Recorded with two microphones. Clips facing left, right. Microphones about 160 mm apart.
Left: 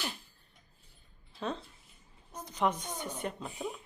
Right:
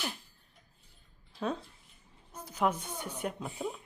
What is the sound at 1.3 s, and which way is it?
Speech, 5° right (ahead or behind).